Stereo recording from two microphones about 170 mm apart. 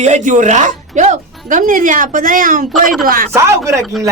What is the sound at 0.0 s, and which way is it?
Speech, 45° right (ahead or behind).